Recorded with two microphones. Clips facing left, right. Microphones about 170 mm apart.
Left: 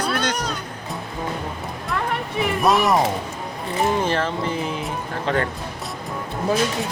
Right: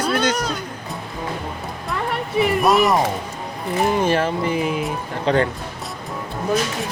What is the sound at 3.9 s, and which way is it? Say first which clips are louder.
Speech: right 4 dB; 10° right (ahead or behind).